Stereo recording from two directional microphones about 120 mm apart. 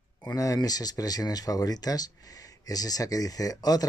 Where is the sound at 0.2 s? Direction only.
25° left (ahead or behind).